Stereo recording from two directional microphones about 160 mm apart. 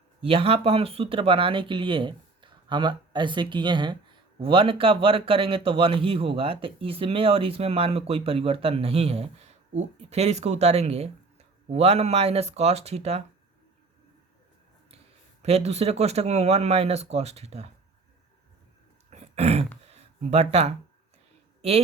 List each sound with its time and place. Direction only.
0.2 s speech: 35° right (ahead or behind)
15.4 s speech: 40° right (ahead or behind)
19.1 s throat clearing: 40° right (ahead or behind)
19.8 s a sound: 40° right (ahead or behind)